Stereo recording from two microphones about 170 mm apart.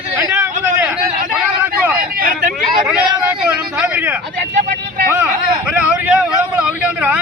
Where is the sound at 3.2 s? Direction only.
5° right (ahead or behind).